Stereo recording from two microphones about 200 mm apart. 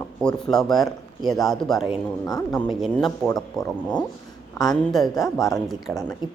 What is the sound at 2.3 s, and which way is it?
Speech, 20° left (ahead or behind).